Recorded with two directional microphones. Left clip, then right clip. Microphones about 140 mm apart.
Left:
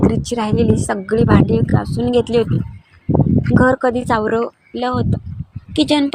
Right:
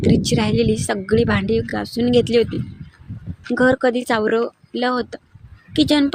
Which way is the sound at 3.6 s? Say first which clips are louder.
Even; 20° right (ahead or behind).